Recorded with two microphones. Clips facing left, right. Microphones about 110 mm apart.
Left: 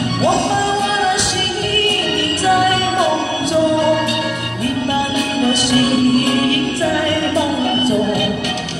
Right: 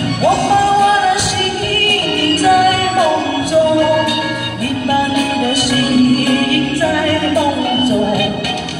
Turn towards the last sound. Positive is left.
turn(degrees=25)  # may be behind; listen again after turning